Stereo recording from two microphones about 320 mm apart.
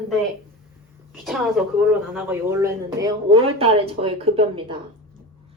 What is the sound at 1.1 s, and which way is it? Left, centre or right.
Speech, centre.